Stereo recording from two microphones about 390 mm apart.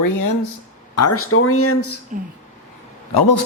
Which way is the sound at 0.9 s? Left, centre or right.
Left.